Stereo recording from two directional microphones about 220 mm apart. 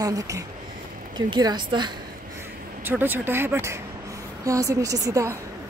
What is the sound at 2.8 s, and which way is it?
Speech, 10° right (ahead or behind).